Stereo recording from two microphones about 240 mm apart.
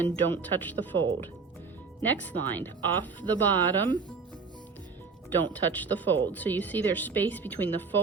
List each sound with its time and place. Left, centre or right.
0.0 s speech: centre
5.4 s speech: centre